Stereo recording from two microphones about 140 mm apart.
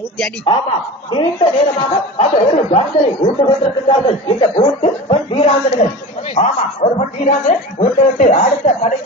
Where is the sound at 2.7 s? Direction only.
50° left (ahead or behind).